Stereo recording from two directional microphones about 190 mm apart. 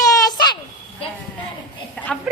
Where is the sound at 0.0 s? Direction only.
20° left (ahead or behind).